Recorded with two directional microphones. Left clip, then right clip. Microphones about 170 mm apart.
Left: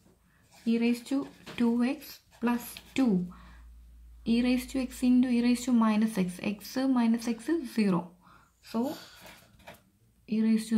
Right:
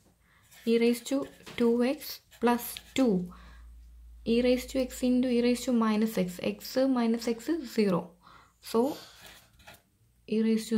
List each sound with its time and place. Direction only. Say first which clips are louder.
0.7 s speech: right 4 dB; 25° right (ahead or behind)
8.3 s a sound: right 7 dB; 40° right (ahead or behind)
10.2 s speech: right 1 dB; 20° right (ahead or behind)